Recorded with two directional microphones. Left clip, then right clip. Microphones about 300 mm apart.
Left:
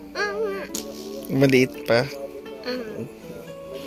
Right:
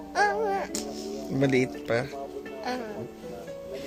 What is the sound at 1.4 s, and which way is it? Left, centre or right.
Speech, centre.